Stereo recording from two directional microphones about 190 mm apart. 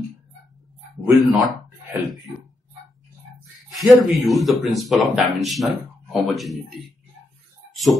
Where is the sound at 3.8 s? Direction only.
Centre (ahead or behind).